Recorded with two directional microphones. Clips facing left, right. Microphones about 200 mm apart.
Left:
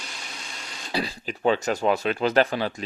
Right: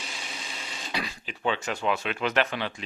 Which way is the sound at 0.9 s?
35° left (ahead or behind).